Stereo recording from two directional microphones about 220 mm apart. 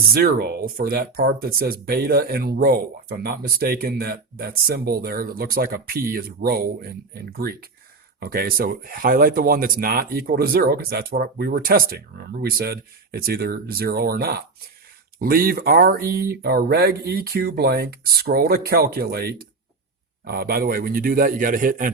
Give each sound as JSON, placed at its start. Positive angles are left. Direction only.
{"t": 0.1, "sound": "a man's voice", "side_deg": -45}